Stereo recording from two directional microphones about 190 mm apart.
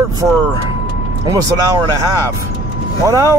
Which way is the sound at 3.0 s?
15° right (ahead or behind).